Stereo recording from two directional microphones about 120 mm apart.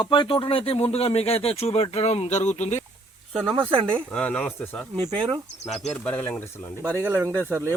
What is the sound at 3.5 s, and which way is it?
Speech, 45° right (ahead or behind).